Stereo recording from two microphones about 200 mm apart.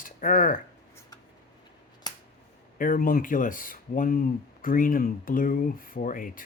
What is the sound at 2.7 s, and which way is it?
Speech, 45° left (ahead or behind).